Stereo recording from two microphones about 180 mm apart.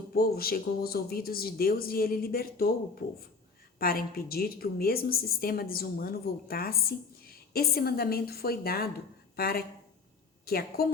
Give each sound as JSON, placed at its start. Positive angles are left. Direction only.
{"t": 0.1, "sound": "a woman's voice", "side_deg": 55}